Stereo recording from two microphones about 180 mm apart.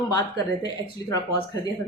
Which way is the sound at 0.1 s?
20° left (ahead or behind).